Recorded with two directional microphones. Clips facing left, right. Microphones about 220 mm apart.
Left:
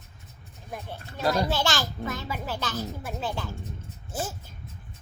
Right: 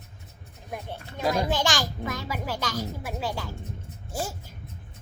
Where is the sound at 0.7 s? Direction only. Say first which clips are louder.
Right 2 dB; 15° right (ahead or behind).